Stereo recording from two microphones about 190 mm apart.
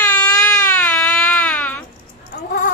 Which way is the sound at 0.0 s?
5° left (ahead or behind).